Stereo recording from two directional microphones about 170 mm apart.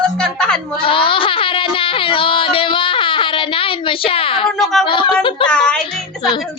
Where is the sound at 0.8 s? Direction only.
30° left (ahead or behind).